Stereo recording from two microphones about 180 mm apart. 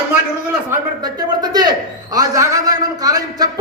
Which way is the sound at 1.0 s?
20° right (ahead or behind).